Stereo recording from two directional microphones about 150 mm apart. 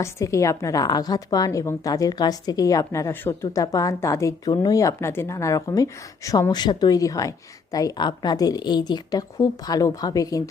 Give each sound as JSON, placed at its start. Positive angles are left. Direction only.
{"t": 0.0, "sound": "speech", "side_deg": 20}